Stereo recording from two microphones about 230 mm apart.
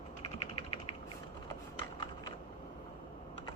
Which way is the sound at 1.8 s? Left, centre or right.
Centre.